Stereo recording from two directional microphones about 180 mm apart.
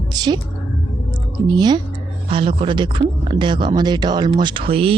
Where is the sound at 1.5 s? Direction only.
25° right (ahead or behind).